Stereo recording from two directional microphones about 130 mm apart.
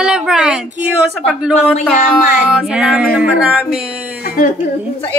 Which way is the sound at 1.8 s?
10° left (ahead or behind).